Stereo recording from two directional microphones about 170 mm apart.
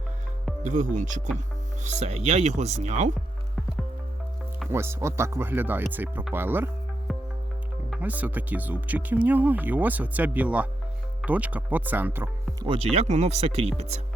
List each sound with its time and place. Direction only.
0.6 s speech: 45° right (ahead or behind)
4.7 s speech: 15° right (ahead or behind)
7.1 s music: centre (ahead or behind)
7.9 s speech: 10° right (ahead or behind)
12.6 s speech: 35° right (ahead or behind)